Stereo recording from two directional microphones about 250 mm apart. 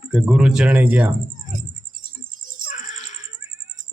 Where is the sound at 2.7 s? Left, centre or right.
Left.